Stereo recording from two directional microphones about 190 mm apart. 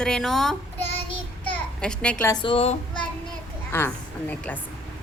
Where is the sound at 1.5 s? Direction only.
5° left (ahead or behind).